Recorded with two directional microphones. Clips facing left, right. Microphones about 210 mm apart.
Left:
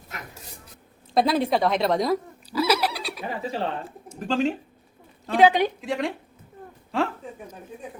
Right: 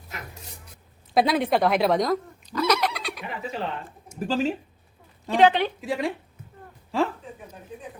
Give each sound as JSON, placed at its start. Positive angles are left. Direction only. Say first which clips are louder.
{"t": 1.1, "sound": "a woman's voice", "louder": "even", "side_deg": 0}
{"t": 1.5, "sound": "neigh", "louder": "right 1 dB", "side_deg": 0}
{"t": 3.2, "sound": "speech", "louder": "left 5 dB", "side_deg": 35}
{"t": 4.2, "sound": "speech", "louder": "left 1 dB", "side_deg": -5}
{"t": 5.3, "sound": "a woman's voice", "louder": "left 1 dB", "side_deg": 10}
{"t": 5.8, "sound": "speech", "louder": "even", "side_deg": -5}